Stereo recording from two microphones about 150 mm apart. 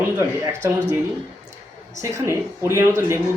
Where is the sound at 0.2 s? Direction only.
20° right (ahead or behind).